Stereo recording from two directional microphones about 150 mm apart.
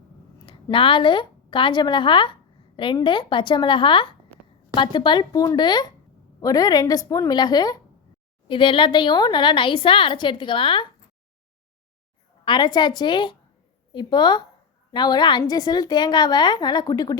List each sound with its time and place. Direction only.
0.4 s a woman's voice: 35° left (ahead or behind)
12.5 s a woman's voice: 30° left (ahead or behind)